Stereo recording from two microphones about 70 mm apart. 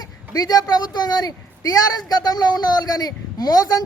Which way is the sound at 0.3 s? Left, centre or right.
Left.